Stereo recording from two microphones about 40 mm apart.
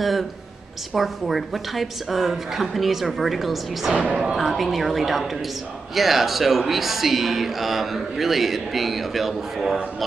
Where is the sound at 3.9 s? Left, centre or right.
Right.